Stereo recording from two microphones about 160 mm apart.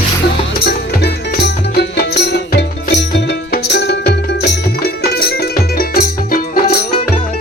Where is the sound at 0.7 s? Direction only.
90° left; by 6.7 s 70° left (ahead or behind).